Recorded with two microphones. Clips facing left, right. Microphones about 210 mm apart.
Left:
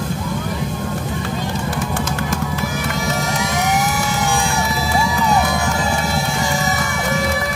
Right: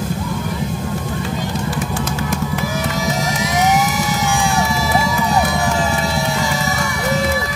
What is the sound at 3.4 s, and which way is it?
Vehicle, 55° left (ahead or behind).